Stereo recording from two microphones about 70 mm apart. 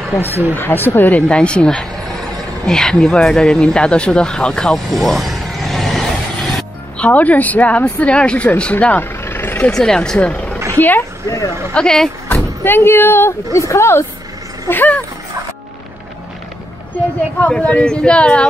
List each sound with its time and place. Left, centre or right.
0.3 s speech: right
0.6 s speech: left
1.3 s speech: centre
7.0 s speech: left
9.2 s vehicle: left
9.7 s speech: centre; by 11.1 s left
11.2 s speech: left
11.7 s speech: centre
12.6 s a woman's voice: left
14.7 s speech: left
17.4 s speech: centre